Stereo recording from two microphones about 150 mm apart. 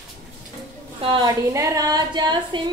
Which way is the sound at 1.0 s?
30° right (ahead or behind).